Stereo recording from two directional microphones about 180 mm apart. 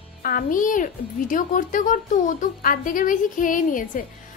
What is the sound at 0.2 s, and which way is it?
A woman's voice, 50° left (ahead or behind).